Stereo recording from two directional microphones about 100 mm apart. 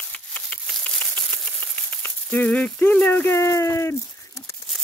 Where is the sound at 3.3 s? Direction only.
30° left (ahead or behind).